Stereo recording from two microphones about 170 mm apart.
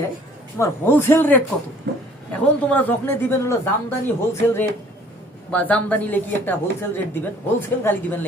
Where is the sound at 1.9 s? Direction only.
90° right.